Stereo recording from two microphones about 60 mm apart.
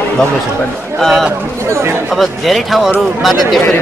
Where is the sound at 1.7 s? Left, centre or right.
Right.